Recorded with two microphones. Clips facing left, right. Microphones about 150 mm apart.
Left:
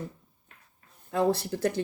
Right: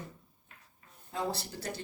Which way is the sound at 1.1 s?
60° left (ahead or behind).